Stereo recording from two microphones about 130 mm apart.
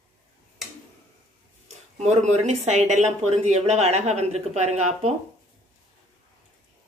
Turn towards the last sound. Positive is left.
turn(degrees=-60)  # may be behind; listen again after turning